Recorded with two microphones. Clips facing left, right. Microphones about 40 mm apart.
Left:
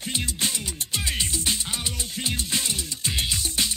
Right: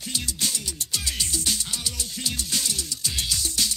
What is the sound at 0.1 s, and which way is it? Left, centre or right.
Music, left.